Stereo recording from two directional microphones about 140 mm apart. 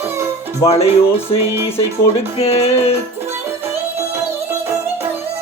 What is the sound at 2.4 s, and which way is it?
Speech, 45° left (ahead or behind).